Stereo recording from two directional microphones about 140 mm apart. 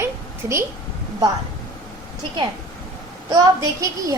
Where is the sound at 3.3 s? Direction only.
25° right (ahead or behind).